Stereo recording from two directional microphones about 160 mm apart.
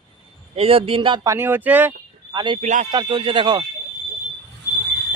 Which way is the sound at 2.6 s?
50° right (ahead or behind).